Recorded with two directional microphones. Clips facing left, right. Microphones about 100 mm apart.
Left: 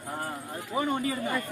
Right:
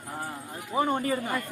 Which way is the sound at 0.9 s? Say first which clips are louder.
Right 2 dB; 50° right (ahead or behind).